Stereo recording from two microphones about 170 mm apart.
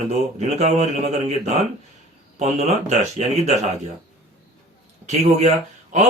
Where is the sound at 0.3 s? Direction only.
40° right (ahead or behind).